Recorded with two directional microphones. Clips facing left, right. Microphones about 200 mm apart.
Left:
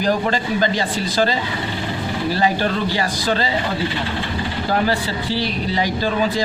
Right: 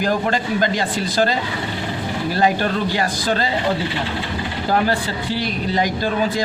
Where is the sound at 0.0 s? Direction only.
50° right (ahead or behind).